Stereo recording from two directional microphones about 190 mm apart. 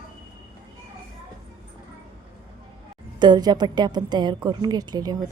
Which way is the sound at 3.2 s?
20° right (ahead or behind).